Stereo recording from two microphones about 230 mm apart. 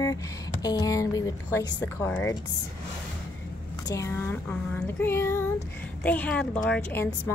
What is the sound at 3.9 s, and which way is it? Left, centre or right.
A woman's voice, centre.